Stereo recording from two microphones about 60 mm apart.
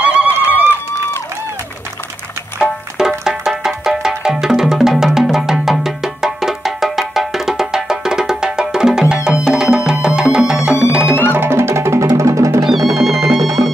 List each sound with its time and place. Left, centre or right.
0.0 s run: right
3.1 s music: centre
11.3 s music: right
12.2 s music: right
12.6 s music: centre